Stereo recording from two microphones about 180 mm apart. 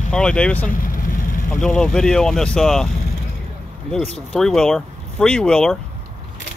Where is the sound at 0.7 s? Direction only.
50° left (ahead or behind).